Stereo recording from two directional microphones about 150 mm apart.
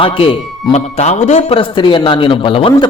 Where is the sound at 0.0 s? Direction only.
35° left (ahead or behind).